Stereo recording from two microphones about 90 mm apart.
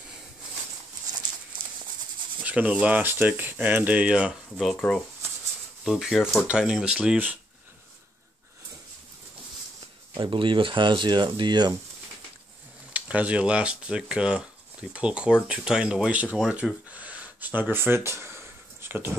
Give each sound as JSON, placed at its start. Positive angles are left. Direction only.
{"t": 2.4, "sound": "speech", "side_deg": -15}
{"t": 4.7, "sound": "speech", "side_deg": 10}
{"t": 5.9, "sound": "speech", "side_deg": -5}
{"t": 10.1, "sound": "speech", "side_deg": -60}
{"t": 12.9, "sound": "speech", "side_deg": -15}
{"t": 16.9, "sound": "a sound", "side_deg": -15}